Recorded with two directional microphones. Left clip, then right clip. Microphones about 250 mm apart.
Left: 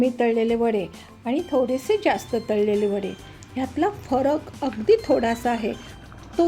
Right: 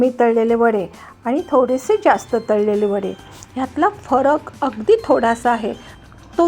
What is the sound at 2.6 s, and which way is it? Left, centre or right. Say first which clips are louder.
Speech: right 5 dB; centre.